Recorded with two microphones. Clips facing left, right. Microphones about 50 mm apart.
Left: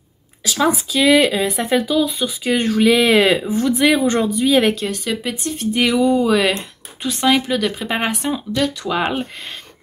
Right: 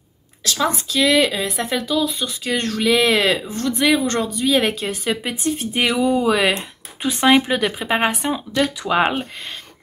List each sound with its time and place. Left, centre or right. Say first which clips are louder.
0.4 s speech: left 3 dB; centre
5.1 s speech: right 1 dB; centre
6.5 s speech: even; centre
7.9 s speech: right 1 dB; centre